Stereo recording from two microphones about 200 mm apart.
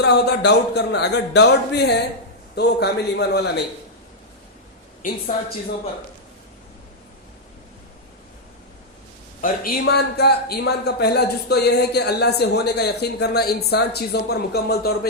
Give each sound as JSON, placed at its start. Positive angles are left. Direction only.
{"t": 0.0, "sound": "a man's voice", "side_deg": 55}
{"t": 9.4, "sound": "a man's voice", "side_deg": 50}